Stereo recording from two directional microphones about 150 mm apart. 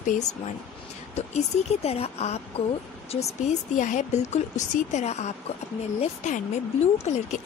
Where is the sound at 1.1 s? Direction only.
45° left (ahead or behind).